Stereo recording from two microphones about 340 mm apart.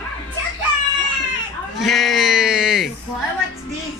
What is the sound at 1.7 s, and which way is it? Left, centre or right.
Bleat, centre.